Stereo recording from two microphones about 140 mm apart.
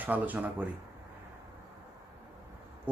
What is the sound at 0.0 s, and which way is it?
Speech, 10° right (ahead or behind).